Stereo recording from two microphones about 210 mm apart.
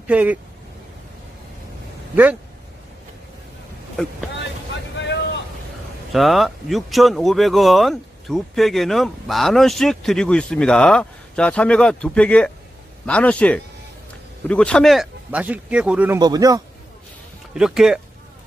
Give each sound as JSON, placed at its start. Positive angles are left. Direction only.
{"t": 0.0, "sound": "speech", "side_deg": -5}
{"t": 4.9, "sound": "boat", "side_deg": 55}
{"t": 6.1, "sound": "speech", "side_deg": 0}
{"t": 16.2, "sound": "speech", "side_deg": -20}
{"t": 17.6, "sound": "speech", "side_deg": 0}